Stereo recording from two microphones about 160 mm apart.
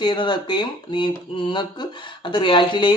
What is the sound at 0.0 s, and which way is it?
Speech, 30° left (ahead or behind).